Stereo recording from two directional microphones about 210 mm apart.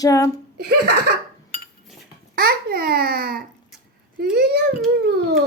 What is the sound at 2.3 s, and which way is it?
Babbling, 45° right (ahead or behind).